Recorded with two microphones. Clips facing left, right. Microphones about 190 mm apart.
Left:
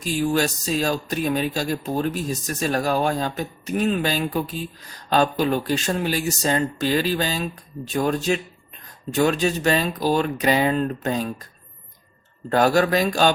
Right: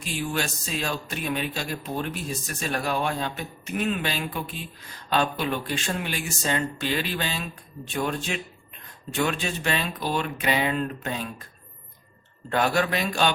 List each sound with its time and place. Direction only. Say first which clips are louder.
0.0 s speech: left 8 dB; 40° left (ahead or behind)
12.5 s speech: left 6 dB; 40° left (ahead or behind)